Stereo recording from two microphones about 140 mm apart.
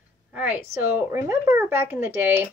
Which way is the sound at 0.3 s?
10° right (ahead or behind).